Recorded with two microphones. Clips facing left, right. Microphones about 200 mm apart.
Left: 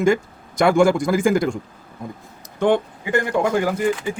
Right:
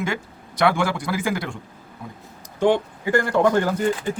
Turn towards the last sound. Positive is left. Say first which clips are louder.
# left 1 dB
turn(degrees=10)  # may be behind; listen again after turning